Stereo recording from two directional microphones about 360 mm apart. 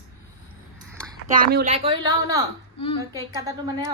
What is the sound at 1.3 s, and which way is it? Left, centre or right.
Speech, right.